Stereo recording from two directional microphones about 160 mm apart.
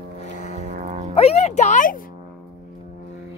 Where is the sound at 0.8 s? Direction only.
40° right (ahead or behind).